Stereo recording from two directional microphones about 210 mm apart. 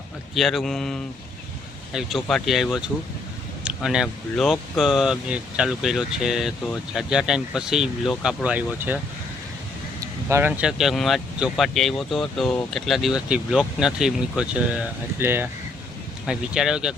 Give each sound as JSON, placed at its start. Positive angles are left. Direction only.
{"t": 0.3, "sound": "speech", "side_deg": 0}
{"t": 10.2, "sound": "speech", "side_deg": -10}